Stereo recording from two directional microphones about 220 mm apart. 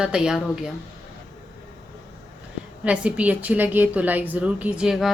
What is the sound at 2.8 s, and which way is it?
A woman's voice, 5° right (ahead or behind).